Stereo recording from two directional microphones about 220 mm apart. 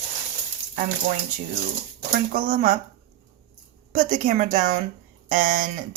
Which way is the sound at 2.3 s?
40° right (ahead or behind).